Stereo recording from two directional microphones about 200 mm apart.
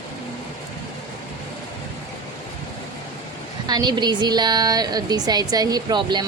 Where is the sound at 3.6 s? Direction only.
20° right (ahead or behind).